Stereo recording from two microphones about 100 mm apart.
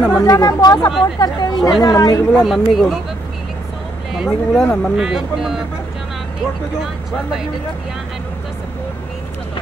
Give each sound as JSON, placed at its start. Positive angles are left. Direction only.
{"t": 0.2, "sound": "speech", "side_deg": 35}
{"t": 2.4, "sound": "speech", "side_deg": 0}
{"t": 4.1, "sound": "speech", "side_deg": 0}
{"t": 4.9, "sound": "speech", "side_deg": -5}
{"t": 6.8, "sound": "speech", "side_deg": -5}